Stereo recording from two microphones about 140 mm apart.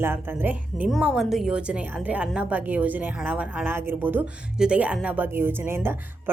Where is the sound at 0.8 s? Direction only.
5° right (ahead or behind).